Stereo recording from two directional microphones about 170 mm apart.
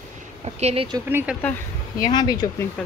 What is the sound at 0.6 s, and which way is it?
Speech, 40° right (ahead or behind).